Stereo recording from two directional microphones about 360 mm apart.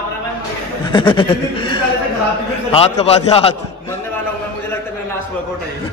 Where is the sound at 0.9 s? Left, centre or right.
Centre.